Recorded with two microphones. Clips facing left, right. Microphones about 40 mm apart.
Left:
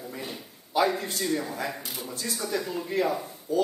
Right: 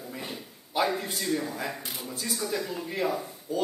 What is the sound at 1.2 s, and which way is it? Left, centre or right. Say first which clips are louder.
A man's voice: left 2 dB; centre.